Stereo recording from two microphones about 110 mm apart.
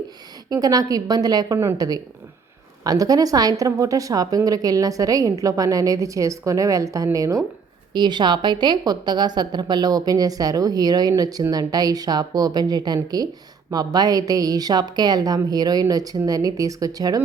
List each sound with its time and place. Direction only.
0.5 s a woman's voice: 35° right (ahead or behind)
7.9 s a woman's voice: 40° right (ahead or behind)